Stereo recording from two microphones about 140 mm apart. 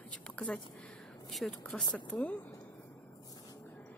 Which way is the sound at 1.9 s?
10° left (ahead or behind).